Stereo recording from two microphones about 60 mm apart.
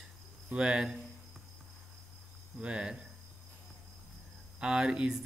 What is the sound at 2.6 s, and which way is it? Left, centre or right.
Speech, centre.